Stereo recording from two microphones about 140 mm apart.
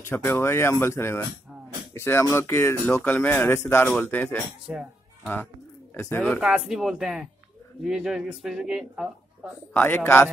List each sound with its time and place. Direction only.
0.1 s speech: 15° left (ahead or behind)
4.7 s speech: 5° right (ahead or behind)
5.2 s speech: 15° left (ahead or behind)
6.4 s speech: 5° right (ahead or behind)
9.8 s speech: 15° left (ahead or behind)